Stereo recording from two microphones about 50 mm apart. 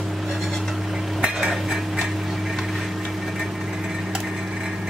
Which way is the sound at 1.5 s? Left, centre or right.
Centre.